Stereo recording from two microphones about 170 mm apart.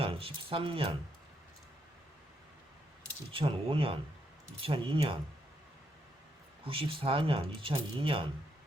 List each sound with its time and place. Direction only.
0.0 s speech: 35° right (ahead or behind)
3.3 s speech: 30° right (ahead or behind)
6.7 s speech: 30° right (ahead or behind)